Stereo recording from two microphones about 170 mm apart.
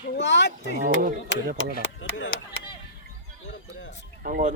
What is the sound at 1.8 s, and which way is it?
Speech, 90° left.